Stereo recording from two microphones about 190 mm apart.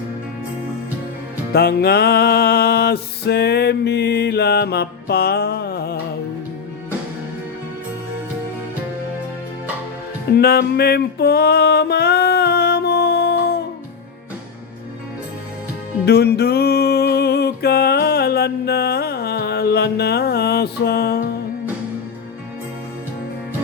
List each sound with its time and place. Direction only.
1.5 s music: 55° left (ahead or behind)
10.3 s music: 55° left (ahead or behind)
16.0 s music: 60° left (ahead or behind)